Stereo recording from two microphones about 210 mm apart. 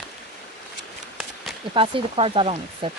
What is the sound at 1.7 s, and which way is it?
Speech, 25° right (ahead or behind).